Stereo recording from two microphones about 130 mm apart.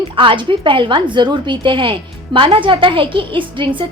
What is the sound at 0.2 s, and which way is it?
A woman's voice, 40° right (ahead or behind).